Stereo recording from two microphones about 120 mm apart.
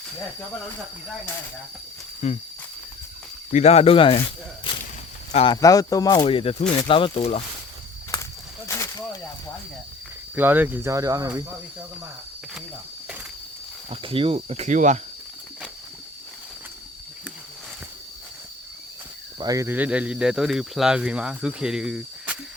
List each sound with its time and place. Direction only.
2.2 s a sound: 70° left (ahead or behind)
3.5 s speech: 65° left (ahead or behind); by 4.2 s 50° left (ahead or behind)
4.7 s whip: 40° left (ahead or behind)
5.5 s speech: 30° left (ahead or behind)
6.2 s speech: 50° left (ahead or behind)
8.6 s a sound: 25° left (ahead or behind)
10.3 s speech: 15° right (ahead or behind)
13.9 s speech: 50° right (ahead or behind); by 15.0 s 90° right
19.4 s speech: 30° right (ahead or behind)
19.7 s speech: 10° right (ahead or behind)